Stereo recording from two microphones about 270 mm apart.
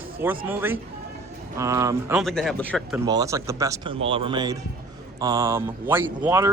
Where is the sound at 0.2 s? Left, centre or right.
Centre.